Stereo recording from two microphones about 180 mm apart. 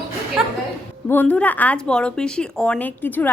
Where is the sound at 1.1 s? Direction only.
10° left (ahead or behind).